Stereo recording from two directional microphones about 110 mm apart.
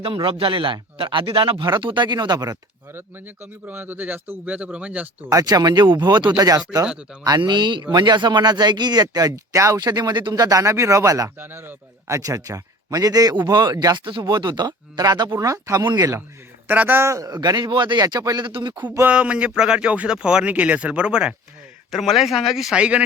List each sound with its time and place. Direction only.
0.0 s a man's voice: 50° right (ahead or behind)
3.7 s speech: 15° right (ahead or behind)
5.3 s a man's voice: 35° right (ahead or behind)
6.8 s speech: 10° right (ahead or behind)
7.3 s a man's voice: 40° right (ahead or behind)
11.3 s a man's voice: 20° right (ahead or behind)
16.6 s a man's voice: 15° right (ahead or behind); by 18.7 s 45° right (ahead or behind)
18.8 s speech: 15° right (ahead or behind)